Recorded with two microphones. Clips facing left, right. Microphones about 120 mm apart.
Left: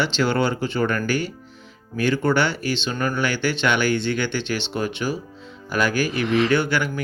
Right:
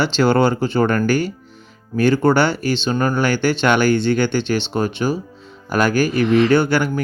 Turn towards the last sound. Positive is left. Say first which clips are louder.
# right 5 dB
turn(degrees=-40)  # may be behind; listen again after turning